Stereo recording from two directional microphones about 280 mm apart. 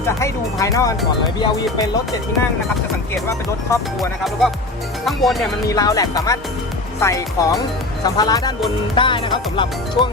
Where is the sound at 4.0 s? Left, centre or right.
Centre.